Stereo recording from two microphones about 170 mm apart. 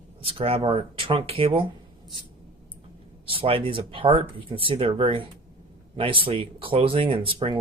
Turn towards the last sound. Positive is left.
turn(degrees=-30)  # may be behind; listen again after turning